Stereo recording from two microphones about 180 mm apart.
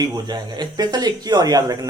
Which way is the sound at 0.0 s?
25° right (ahead or behind).